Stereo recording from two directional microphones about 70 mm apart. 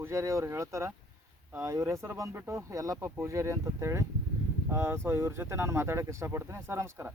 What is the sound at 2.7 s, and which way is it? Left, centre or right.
Speech, right.